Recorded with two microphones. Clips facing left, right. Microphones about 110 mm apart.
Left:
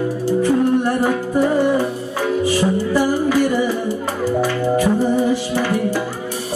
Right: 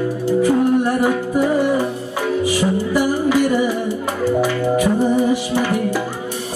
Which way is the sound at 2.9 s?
15° right (ahead or behind).